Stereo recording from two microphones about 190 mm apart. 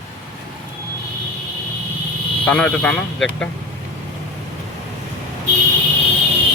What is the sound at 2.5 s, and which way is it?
A man's voice, 5° left (ahead or behind).